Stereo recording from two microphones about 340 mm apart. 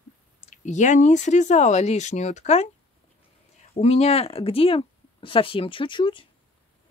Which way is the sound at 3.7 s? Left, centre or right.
Centre.